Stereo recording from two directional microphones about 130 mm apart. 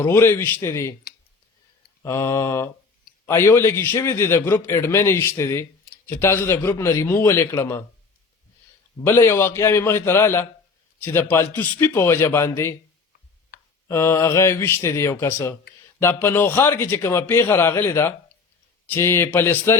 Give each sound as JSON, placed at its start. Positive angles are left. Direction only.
{"t": 0.0, "sound": "a man's voice", "side_deg": 20}
{"t": 2.0, "sound": "a man's voice", "side_deg": 20}
{"t": 9.0, "sound": "a man's voice", "side_deg": 20}
{"t": 13.8, "sound": "a man's voice", "side_deg": 20}